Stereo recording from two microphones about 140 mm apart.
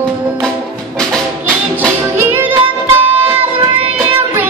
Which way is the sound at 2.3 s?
15° right (ahead or behind).